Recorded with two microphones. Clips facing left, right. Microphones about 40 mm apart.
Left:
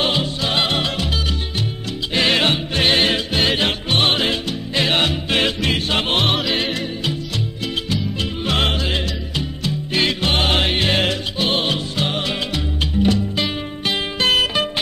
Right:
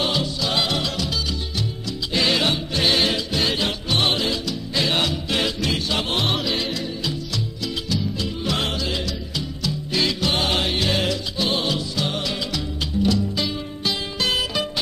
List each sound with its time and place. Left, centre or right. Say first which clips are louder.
0.0 s music: left 3 dB; left
6.2 s music: left 4 dB; centre
6.5 s music: left 4 dB; left